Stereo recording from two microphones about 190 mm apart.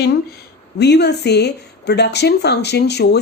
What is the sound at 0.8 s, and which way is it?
A woman's voice, 60° left (ahead or behind).